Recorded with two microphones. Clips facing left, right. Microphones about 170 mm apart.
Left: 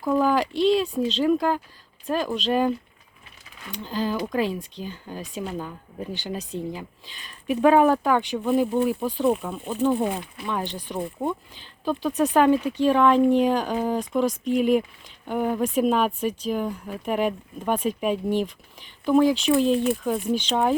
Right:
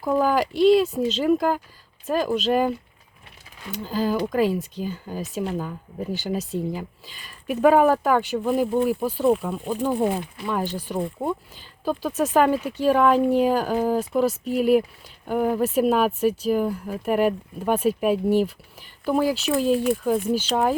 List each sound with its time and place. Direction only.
0.0 s speech: 10° right (ahead or behind)